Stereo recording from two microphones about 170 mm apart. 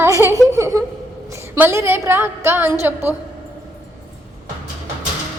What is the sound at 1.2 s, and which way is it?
A woman's voice, 15° right (ahead or behind).